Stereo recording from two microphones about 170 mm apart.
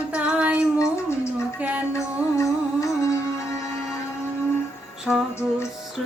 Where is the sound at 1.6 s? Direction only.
10° right (ahead or behind).